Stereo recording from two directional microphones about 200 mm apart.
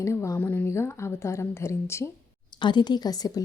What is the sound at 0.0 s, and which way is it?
A woman's voice, 15° left (ahead or behind).